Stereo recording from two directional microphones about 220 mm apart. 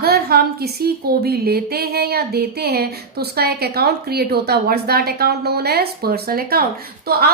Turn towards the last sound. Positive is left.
turn(degrees=-45)  # may be behind; listen again after turning